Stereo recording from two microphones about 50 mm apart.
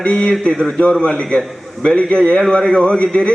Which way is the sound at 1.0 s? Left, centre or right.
Left.